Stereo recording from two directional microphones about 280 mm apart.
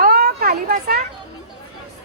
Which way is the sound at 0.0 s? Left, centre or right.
Right.